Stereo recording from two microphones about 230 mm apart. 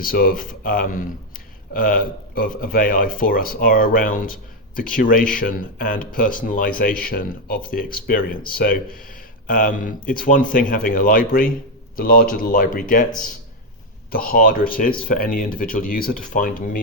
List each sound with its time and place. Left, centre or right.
0.0 s speech: left
14.1 s speech: left